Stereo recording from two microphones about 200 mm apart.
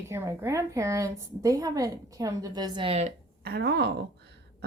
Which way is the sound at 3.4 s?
55° right (ahead or behind).